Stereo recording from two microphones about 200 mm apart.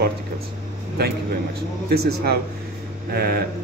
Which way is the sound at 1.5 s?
55° right (ahead or behind).